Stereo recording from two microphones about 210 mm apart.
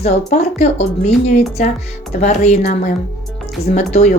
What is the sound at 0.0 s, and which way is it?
A woman's voice, 30° left (ahead or behind).